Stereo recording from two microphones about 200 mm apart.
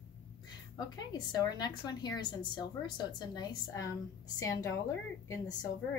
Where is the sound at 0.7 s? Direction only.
20° left (ahead or behind).